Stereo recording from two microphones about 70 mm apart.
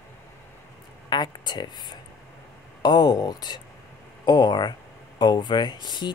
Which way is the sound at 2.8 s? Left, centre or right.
Left.